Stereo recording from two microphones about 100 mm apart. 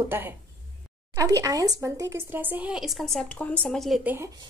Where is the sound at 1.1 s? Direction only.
35° right (ahead or behind); by 2.7 s 20° right (ahead or behind).